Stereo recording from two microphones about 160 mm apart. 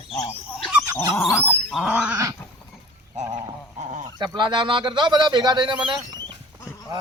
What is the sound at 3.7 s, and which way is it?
Goose, 45° right (ahead or behind).